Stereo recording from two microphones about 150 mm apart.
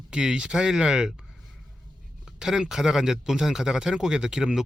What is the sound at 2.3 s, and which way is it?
Speech, 5° right (ahead or behind).